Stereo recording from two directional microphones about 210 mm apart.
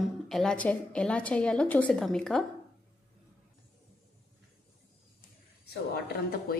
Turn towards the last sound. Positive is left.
turn(degrees=50)  # may be behind; listen again after turning